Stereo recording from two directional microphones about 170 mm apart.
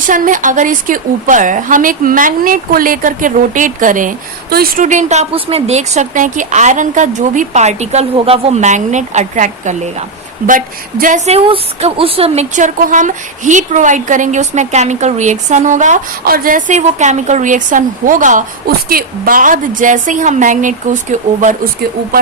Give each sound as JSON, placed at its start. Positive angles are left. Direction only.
{"t": 0.1, "sound": "a woman's voice", "side_deg": -50}
{"t": 11.3, "sound": "a woman's voice", "side_deg": -35}
{"t": 16.2, "sound": "a woman's voice", "side_deg": -60}